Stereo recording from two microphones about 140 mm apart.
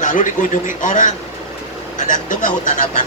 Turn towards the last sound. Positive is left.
turn(degrees=70)  # may be behind; listen again after turning